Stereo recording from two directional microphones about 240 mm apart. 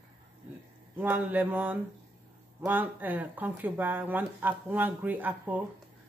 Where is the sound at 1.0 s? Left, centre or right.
Centre.